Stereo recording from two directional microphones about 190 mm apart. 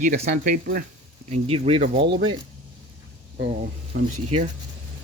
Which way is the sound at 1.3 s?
30° right (ahead or behind).